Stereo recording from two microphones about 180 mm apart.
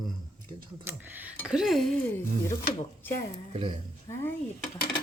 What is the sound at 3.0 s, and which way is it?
Speech, 10° left (ahead or behind).